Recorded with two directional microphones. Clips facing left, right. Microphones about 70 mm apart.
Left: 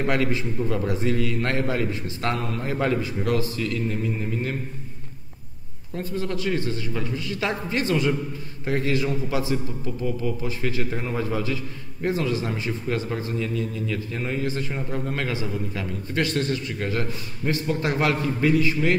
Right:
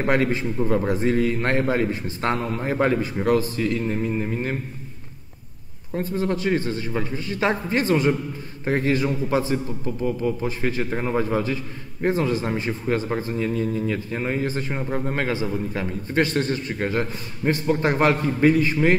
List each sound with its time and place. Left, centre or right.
0.0 s a man's voice: right
5.9 s a man's voice: right